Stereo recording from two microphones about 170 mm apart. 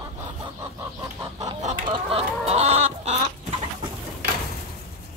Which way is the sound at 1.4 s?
45° right (ahead or behind).